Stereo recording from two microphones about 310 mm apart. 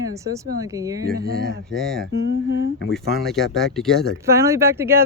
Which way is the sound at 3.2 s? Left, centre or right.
Centre.